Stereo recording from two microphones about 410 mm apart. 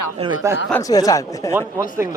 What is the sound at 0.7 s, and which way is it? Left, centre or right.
Speech, centre.